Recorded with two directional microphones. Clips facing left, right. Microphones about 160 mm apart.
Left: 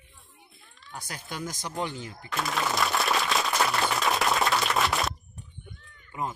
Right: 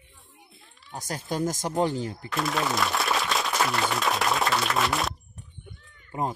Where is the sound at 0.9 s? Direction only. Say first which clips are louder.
Right 7 dB; 40° right (ahead or behind).